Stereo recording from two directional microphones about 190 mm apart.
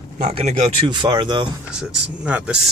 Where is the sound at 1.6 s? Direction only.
5° right (ahead or behind).